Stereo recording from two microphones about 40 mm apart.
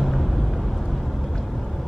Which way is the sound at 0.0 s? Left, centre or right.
Centre.